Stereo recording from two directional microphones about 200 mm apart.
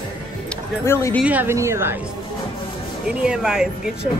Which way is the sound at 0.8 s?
15° left (ahead or behind).